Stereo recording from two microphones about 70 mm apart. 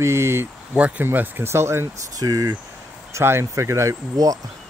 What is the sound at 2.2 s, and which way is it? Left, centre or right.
Speech, right.